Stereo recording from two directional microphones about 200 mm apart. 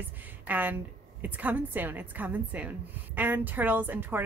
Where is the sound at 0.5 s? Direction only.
10° right (ahead or behind).